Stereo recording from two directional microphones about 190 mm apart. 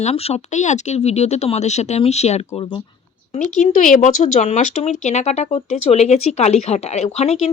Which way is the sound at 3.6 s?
45° left (ahead or behind).